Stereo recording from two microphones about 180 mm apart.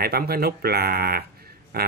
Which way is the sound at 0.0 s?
60° right (ahead or behind).